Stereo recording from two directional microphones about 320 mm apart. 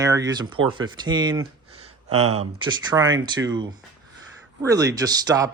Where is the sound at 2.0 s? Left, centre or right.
Right.